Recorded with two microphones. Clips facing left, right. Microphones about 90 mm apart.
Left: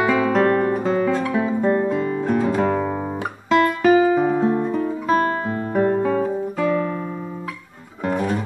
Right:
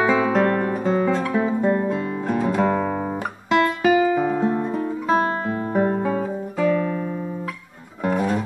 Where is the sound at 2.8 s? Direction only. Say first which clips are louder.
Even; centre (ahead or behind).